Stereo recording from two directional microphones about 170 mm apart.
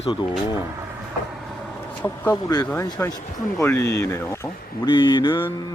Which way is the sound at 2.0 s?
15° left (ahead or behind).